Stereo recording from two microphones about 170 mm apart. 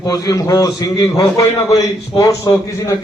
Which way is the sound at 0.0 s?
20° left (ahead or behind).